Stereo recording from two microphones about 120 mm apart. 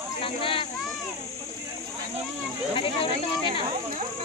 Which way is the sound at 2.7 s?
50° left (ahead or behind).